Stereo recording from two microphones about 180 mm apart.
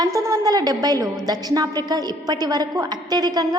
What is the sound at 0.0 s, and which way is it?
A woman's voice, 20° right (ahead or behind).